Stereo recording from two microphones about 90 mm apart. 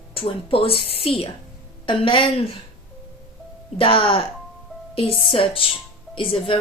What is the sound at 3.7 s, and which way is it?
Speech, 85° left.